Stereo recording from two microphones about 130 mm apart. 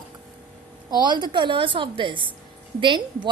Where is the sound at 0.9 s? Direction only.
35° right (ahead or behind).